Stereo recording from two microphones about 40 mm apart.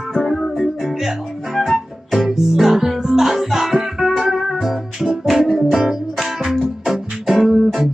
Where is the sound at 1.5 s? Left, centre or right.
Centre.